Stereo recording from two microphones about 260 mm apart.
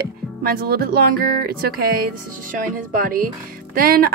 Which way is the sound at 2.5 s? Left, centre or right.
Right.